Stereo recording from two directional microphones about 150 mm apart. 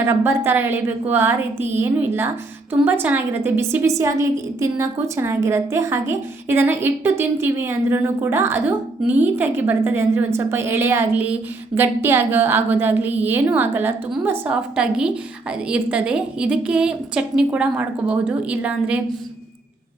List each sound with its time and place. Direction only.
0.0 s a woman's voice: 15° right (ahead or behind)